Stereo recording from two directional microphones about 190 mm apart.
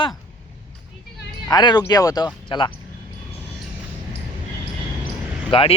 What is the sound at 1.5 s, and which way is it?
Speech, 20° left (ahead or behind).